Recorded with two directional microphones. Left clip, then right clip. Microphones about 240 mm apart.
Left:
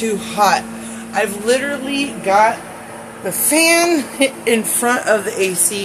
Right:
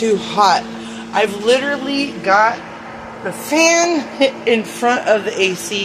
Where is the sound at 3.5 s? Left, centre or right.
Centre.